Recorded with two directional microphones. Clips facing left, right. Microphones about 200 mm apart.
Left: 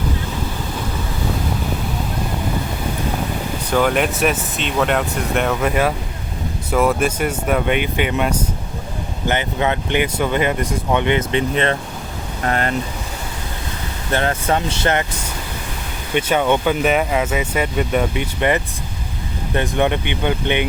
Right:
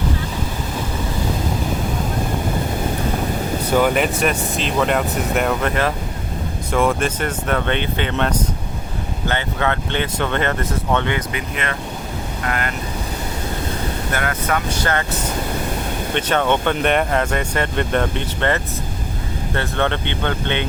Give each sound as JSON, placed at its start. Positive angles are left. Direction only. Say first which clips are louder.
{"t": 3.7, "sound": "speech", "louder": "even", "side_deg": -5}
{"t": 14.1, "sound": "speech", "louder": "left 5 dB", "side_deg": 25}